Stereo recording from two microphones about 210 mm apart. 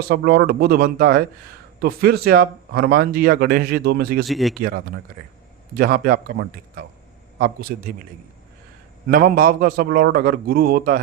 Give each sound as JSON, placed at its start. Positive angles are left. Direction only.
{"t": 0.1, "sound": "speech", "side_deg": -45}
{"t": 4.3, "sound": "speech", "side_deg": 0}
{"t": 5.7, "sound": "a man's voice", "side_deg": -40}
{"t": 9.0, "sound": "speech", "side_deg": -45}